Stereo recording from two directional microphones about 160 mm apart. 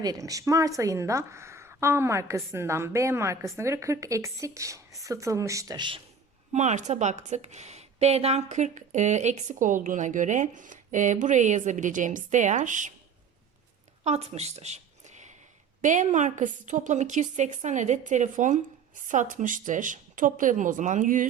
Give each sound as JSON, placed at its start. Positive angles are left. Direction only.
{"t": 0.0, "sound": "a woman's voice", "side_deg": -20}
{"t": 6.5, "sound": "a woman's voice", "side_deg": -45}
{"t": 14.0, "sound": "a woman's voice", "side_deg": -40}